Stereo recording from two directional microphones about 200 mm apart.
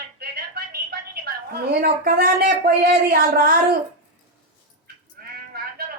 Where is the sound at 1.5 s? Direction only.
50° right (ahead or behind).